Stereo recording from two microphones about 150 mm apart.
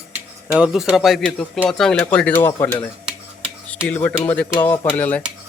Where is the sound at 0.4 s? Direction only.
5° right (ahead or behind); by 2.5 s 10° left (ahead or behind).